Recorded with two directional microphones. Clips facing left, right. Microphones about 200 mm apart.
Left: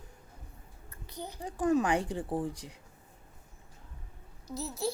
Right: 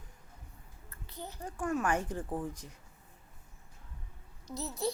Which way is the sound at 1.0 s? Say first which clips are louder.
Left 3 dB; 10° left (ahead or behind).